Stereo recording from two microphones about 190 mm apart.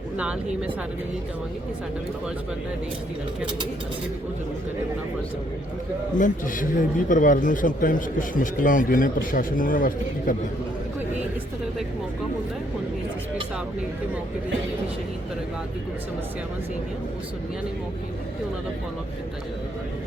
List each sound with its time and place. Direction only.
6.1 s a man's voice: 45° left (ahead or behind)